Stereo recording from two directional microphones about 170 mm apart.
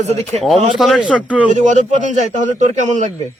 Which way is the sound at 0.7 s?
Centre (ahead or behind).